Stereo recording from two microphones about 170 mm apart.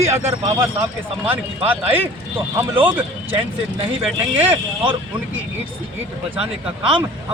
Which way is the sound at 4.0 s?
10° right (ahead or behind).